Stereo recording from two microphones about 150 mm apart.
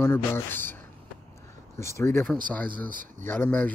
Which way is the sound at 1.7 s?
20° left (ahead or behind).